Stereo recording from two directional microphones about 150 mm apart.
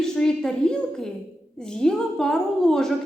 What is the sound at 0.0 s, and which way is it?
A woman's voice, 5° left (ahead or behind).